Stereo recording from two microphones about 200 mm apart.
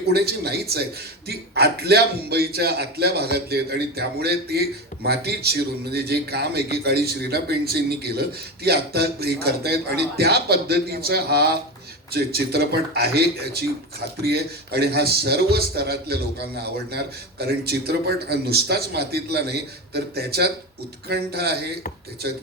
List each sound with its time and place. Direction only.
0.1 s a man's voice: 50° right (ahead or behind)